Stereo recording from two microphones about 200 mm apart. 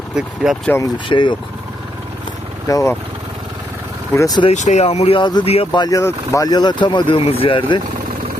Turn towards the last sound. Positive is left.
turn(degrees=25)  # may be behind; listen again after turning